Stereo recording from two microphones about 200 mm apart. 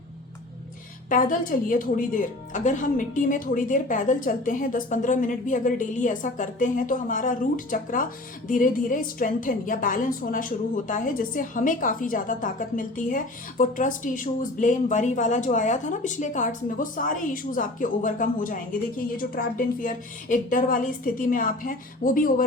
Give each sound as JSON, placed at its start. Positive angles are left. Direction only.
{"t": 1.1, "sound": "a woman's voice", "side_deg": 45}